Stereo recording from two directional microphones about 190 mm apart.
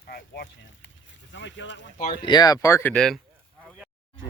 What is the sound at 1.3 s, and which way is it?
Speech, 70° left (ahead or behind).